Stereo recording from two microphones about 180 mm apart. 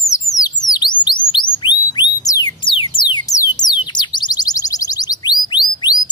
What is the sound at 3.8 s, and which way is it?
Chirp tone, 25° left (ahead or behind).